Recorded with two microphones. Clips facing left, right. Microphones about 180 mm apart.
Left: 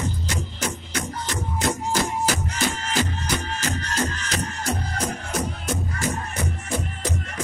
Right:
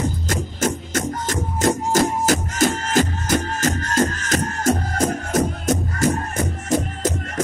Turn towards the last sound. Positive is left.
turn(degrees=-45)  # may be behind; listen again after turning